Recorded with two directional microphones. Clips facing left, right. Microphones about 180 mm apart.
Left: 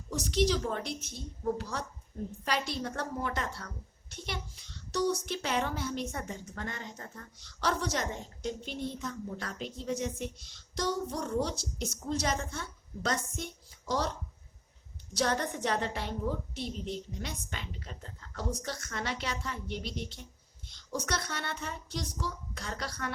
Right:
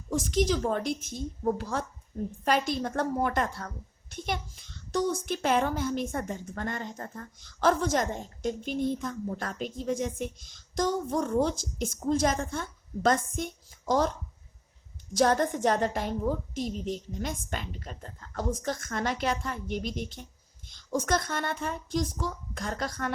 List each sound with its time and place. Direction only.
0.1 s a woman's voice: 50° right (ahead or behind)
4.9 s a woman's voice: 50° right (ahead or behind)
15.1 s a woman's voice: 45° right (ahead or behind)